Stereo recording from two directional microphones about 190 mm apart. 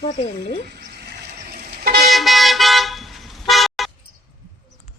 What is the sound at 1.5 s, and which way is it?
Vehicle, 55° right (ahead or behind).